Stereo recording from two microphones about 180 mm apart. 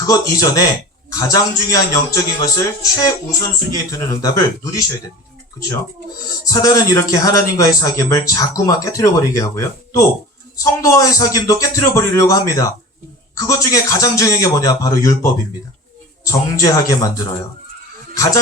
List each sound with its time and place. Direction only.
0.0 s speech: 20° left (ahead or behind)
6.4 s a man's voice: 20° left (ahead or behind)
18.1 s speech: 20° left (ahead or behind)